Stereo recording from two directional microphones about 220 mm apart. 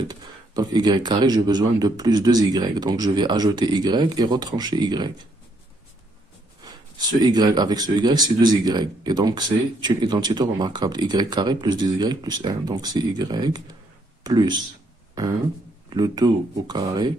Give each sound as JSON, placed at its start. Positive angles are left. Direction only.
{"t": 0.1, "sound": "speech", "side_deg": -20}
{"t": 6.6, "sound": "speech", "side_deg": -20}
{"t": 15.9, "sound": "speech", "side_deg": -20}